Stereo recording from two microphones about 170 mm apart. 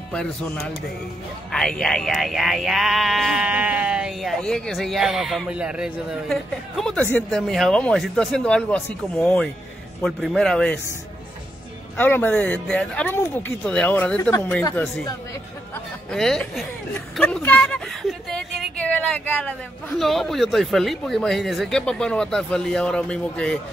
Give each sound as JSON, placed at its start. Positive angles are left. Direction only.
{"t": 0.1, "sound": "speech", "side_deg": 5}
{"t": 12.0, "sound": "speech", "side_deg": 10}
{"t": 16.1, "sound": "a woman's voice", "side_deg": 0}